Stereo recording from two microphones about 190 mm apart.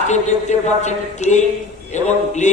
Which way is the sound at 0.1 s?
40° left (ahead or behind).